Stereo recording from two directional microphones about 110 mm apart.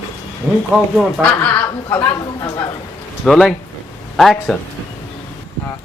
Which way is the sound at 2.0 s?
25° left (ahead or behind).